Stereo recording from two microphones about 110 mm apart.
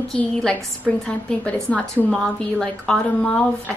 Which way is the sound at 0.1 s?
5° left (ahead or behind).